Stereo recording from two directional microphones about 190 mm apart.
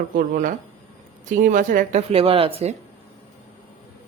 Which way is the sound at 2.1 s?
30° right (ahead or behind).